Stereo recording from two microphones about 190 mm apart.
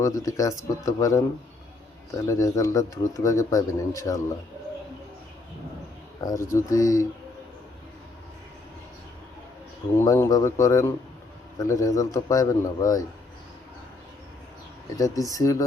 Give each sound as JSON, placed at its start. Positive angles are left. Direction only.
{"t": 0.0, "sound": "a man's voice", "side_deg": 15}
{"t": 2.2, "sound": "a man's voice", "side_deg": 15}
{"t": 6.2, "sound": "a man's voice", "side_deg": 15}
{"t": 10.0, "sound": "a man's voice", "side_deg": 20}
{"t": 14.9, "sound": "a man's voice", "side_deg": 15}